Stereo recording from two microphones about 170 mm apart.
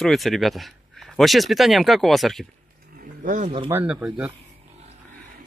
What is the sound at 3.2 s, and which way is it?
Speech, 50° right (ahead or behind).